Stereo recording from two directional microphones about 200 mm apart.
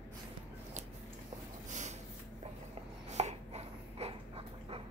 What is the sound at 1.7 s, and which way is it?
Snort, 35° right (ahead or behind).